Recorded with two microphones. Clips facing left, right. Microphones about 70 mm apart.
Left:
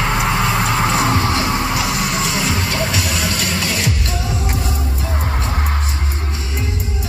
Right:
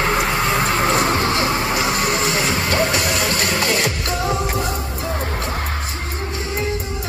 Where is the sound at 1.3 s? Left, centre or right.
Right.